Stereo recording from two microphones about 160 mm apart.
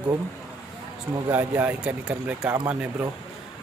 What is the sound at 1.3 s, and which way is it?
Speech, 10° right (ahead or behind).